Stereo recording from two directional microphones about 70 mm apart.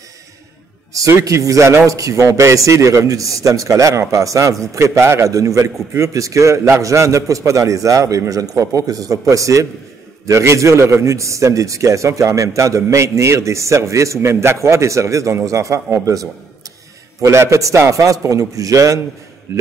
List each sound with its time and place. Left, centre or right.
1.2 s a man's voice: right